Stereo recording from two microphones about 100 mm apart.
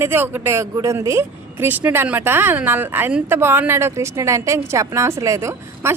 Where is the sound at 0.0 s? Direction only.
20° right (ahead or behind).